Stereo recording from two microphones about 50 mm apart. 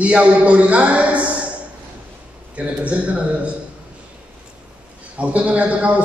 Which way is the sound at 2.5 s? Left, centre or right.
Right.